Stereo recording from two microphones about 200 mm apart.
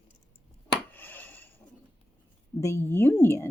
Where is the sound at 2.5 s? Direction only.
15° left (ahead or behind).